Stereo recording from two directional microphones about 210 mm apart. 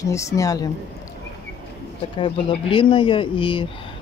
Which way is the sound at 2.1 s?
25° left (ahead or behind).